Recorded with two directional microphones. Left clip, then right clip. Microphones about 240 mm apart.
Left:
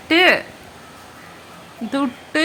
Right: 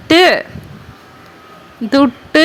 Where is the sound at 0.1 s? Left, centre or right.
Right.